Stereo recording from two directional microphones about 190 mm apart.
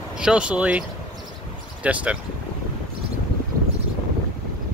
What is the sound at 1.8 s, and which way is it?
Speech, 5° right (ahead or behind).